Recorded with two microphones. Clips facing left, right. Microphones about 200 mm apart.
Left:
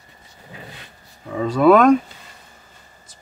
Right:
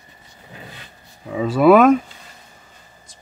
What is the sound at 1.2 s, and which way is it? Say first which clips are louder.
Speech: right 1 dB; 5° right (ahead or behind).